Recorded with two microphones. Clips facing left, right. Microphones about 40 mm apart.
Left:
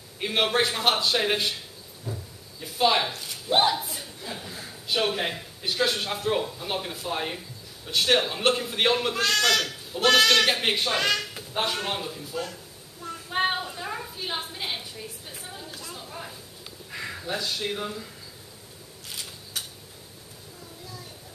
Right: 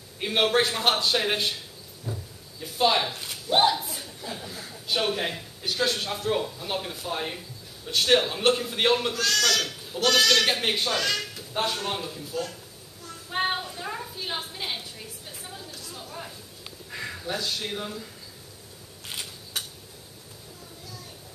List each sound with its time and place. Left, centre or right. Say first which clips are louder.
0.5 s a man's voice: even; centre
2.1 s cupboard open or close: even; centre
2.6 s a man's voice: even; centre
9.1 s speech: left 2 dB; left
10.4 s speech: left 1 dB; centre
10.9 s speech: left 2 dB; left
11.5 s speech: even; centre
13.7 s a sound: even; centre
16.9 s a sound: even; centre
17.3 s speech: left 1 dB; centre
19.0 s a sound: right 2 dB; right